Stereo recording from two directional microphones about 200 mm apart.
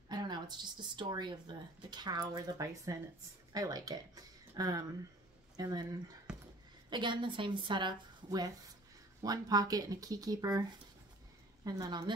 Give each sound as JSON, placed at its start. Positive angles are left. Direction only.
{"t": 0.1, "sound": "speech", "side_deg": -20}
{"t": 6.3, "sound": "a sound", "side_deg": -5}
{"t": 6.9, "sound": "speech", "side_deg": -25}
{"t": 11.6, "sound": "speech", "side_deg": -20}